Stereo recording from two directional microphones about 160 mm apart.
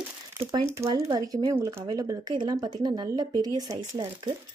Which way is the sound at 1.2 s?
20° right (ahead or behind).